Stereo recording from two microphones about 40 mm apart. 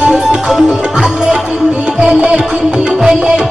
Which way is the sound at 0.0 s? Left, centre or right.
Right.